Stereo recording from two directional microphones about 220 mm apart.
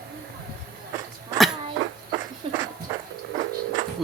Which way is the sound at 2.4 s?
25° right (ahead or behind).